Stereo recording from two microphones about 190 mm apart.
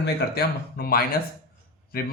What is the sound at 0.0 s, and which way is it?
A man's voice, 55° left (ahead or behind).